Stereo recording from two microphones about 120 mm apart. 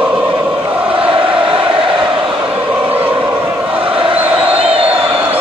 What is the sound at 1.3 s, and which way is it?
Chant, 45° right (ahead or behind).